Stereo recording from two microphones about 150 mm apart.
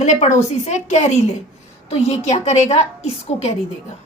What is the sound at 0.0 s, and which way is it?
A woman's voice, 50° left (ahead or behind).